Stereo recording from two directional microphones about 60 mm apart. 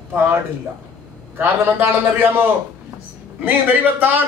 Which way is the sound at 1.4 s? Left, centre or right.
Right.